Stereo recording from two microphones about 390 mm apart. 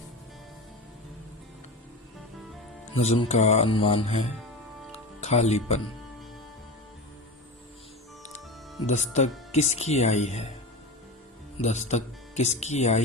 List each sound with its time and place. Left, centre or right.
2.8 s speech: centre
4.9 s music: centre
8.9 s speech: centre
11.6 s speech: centre